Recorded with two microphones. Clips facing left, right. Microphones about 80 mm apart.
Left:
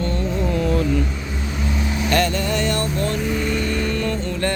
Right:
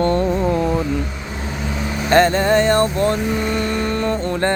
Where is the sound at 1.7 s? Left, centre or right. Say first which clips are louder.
Right 6 dB; right.